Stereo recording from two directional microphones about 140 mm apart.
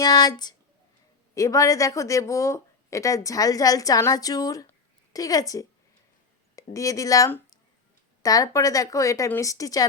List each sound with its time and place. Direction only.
0.0 s speech: 30° left (ahead or behind)